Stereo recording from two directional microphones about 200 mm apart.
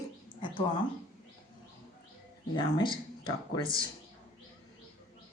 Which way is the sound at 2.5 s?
25° left (ahead or behind).